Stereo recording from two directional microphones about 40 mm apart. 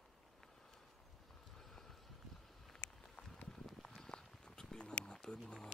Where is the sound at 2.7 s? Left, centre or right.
Left.